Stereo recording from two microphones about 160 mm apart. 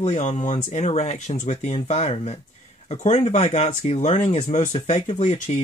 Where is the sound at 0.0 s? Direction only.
45° left (ahead or behind).